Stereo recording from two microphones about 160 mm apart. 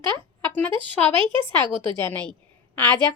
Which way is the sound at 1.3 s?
30° right (ahead or behind).